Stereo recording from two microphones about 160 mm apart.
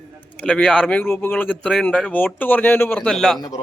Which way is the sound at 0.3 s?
5° left (ahead or behind).